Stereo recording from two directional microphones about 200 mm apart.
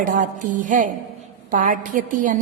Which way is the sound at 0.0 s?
40° right (ahead or behind).